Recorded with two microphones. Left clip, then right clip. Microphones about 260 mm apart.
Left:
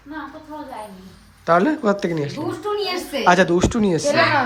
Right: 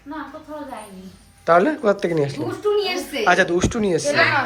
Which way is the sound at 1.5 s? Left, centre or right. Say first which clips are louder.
Right 1 dB; centre.